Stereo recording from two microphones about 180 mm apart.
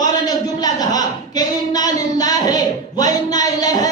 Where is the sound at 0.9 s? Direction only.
20° left (ahead or behind).